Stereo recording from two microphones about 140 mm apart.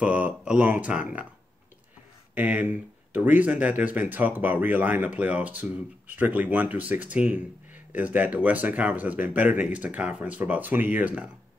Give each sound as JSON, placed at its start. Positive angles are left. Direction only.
{"t": 0.0, "sound": "speech", "side_deg": -10}
{"t": 2.3, "sound": "speech", "side_deg": -10}